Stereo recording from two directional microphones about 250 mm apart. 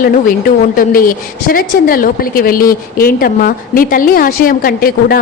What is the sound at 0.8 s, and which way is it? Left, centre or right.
A woman's voice, left.